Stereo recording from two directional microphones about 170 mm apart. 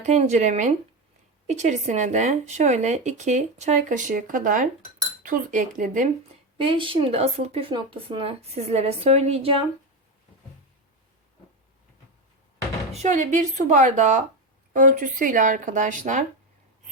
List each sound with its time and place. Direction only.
0.0 s speech: 45° right (ahead or behind)
6.6 s speech: 30° right (ahead or behind)
12.9 s speech: 45° right (ahead or behind)